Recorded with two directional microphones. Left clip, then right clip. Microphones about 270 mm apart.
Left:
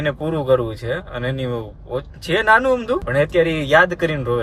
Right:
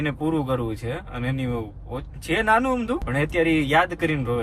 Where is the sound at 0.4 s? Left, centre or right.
Centre.